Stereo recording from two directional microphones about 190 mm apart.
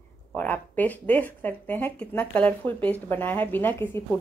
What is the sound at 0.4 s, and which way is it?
Speech, 10° left (ahead or behind).